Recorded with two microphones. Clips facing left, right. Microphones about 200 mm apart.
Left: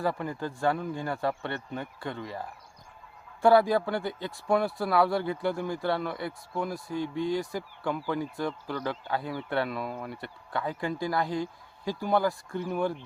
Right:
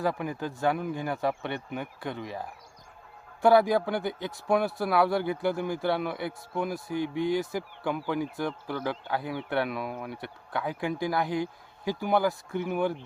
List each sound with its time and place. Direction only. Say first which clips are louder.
0.0 s speech: right 1 dB; 15° right (ahead or behind)
3.4 s speech: even; centre (ahead or behind)
3.8 s speech: right 1 dB; 15° right (ahead or behind)
4.4 s speech: even; centre (ahead or behind)
12.5 s speech: right 1 dB; 5° right (ahead or behind)